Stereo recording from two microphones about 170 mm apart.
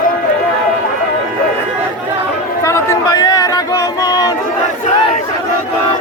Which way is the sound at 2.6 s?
15° left (ahead or behind).